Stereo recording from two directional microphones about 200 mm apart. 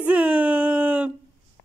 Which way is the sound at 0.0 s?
5° right (ahead or behind).